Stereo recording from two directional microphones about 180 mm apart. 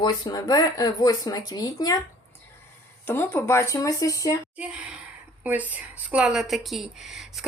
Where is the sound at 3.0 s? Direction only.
10° left (ahead or behind).